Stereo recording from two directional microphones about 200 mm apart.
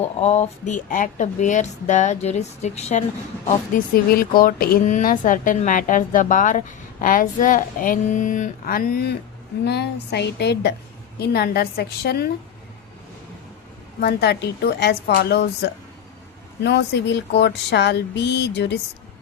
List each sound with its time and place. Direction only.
0.0 s speech: 35° left (ahead or behind)
3.9 s speech: 45° left (ahead or behind)
14.0 s speech: 55° left (ahead or behind)